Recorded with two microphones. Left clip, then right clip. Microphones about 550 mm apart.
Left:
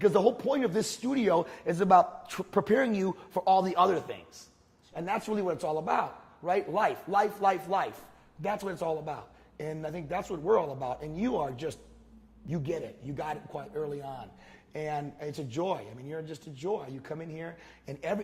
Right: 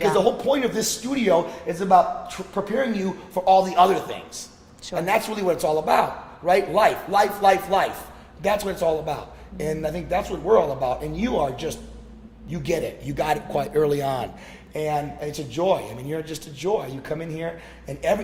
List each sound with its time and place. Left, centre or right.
0.1 s a man's voice: left
5.0 s a man's voice: left
12.5 s a man's voice: left
13.1 s a man's voice: centre
14.7 s a man's voice: left